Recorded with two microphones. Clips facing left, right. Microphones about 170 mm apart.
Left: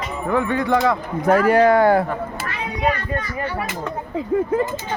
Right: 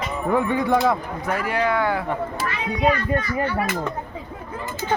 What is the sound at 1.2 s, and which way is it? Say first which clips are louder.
Speech: left 9 dB; 45° left (ahead or behind).